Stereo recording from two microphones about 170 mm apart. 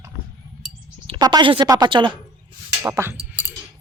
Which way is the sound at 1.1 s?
25° right (ahead or behind).